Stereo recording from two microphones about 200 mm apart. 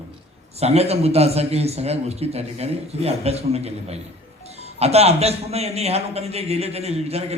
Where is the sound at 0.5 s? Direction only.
30° right (ahead or behind).